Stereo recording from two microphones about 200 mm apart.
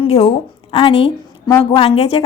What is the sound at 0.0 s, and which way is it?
A woman's voice, 30° left (ahead or behind).